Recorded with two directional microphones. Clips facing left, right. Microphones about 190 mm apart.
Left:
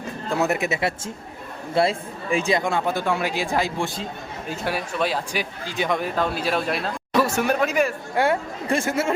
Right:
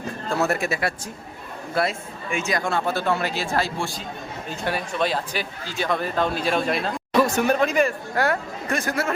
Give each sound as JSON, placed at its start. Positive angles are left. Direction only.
{"t": 0.3, "sound": "speech", "side_deg": 15}
{"t": 2.6, "sound": "speech", "side_deg": 15}
{"t": 4.4, "sound": "speech", "side_deg": 5}
{"t": 8.1, "sound": "speech", "side_deg": 25}